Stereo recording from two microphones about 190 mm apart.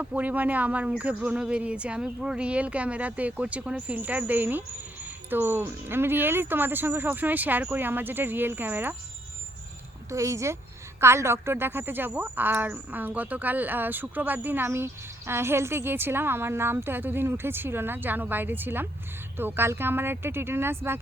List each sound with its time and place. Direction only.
0.0 s speech: 10° right (ahead or behind)
10.1 s speech: 15° right (ahead or behind)